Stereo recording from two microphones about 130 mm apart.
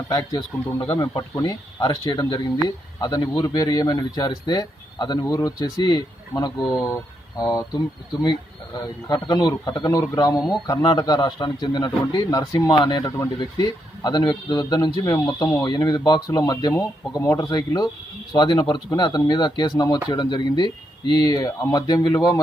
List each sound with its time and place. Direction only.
0.1 s speech: 30° left (ahead or behind)